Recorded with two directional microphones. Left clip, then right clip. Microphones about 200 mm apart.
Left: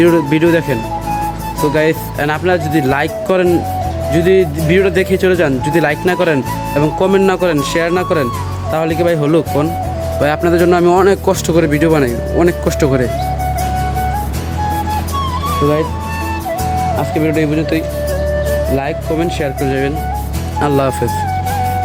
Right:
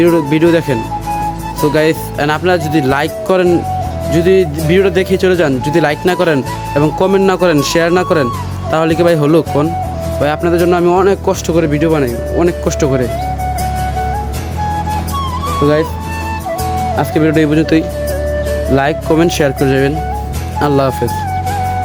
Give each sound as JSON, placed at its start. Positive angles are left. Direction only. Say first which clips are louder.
{"t": 0.0, "sound": "speech", "louder": "right 1 dB", "side_deg": -10}
{"t": 7.3, "sound": "speech", "louder": "right 3 dB", "side_deg": -30}
{"t": 10.2, "sound": "speech", "louder": "even", "side_deg": -5}
{"t": 17.0, "sound": "speech", "louder": "right 3 dB", "side_deg": -40}
{"t": 20.6, "sound": "speech", "louder": "right 1 dB", "side_deg": -20}